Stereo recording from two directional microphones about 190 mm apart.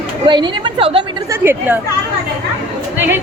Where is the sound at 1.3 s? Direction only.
10° right (ahead or behind).